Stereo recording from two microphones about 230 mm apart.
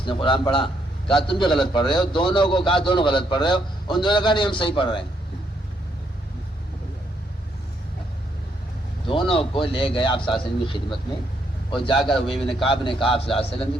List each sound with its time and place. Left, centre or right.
0.0 s a man's voice: left
9.0 s a man's voice: left
12.3 s a man's voice: centre
12.6 s a man's voice: left